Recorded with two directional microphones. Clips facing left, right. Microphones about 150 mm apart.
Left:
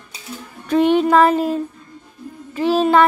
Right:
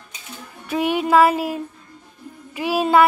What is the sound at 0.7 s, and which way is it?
Music, 10° right (ahead or behind).